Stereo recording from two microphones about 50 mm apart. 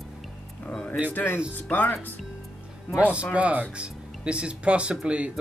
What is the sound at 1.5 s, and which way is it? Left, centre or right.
Speech, left.